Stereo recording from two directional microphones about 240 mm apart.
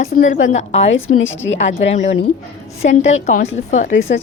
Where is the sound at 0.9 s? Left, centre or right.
Left.